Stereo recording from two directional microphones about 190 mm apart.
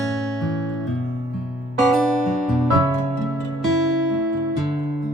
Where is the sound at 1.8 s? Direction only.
Centre (ahead or behind).